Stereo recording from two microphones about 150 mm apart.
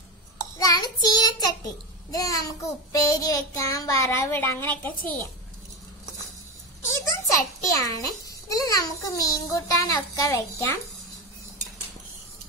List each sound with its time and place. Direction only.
0.6 s child singing: 25° left (ahead or behind)
3.1 s a child's voice: 20° left (ahead or behind)
6.9 s a child's voice: 20° left (ahead or behind)